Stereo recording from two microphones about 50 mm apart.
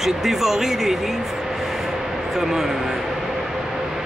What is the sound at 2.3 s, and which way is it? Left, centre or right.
Speech, centre.